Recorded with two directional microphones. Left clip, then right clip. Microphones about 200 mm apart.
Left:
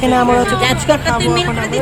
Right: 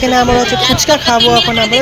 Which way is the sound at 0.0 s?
5° right (ahead or behind).